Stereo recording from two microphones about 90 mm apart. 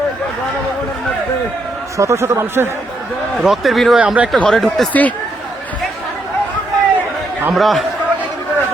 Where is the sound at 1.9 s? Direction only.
35° right (ahead or behind).